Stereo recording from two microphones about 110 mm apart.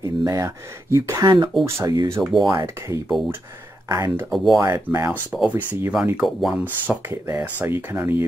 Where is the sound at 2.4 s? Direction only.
30° right (ahead or behind).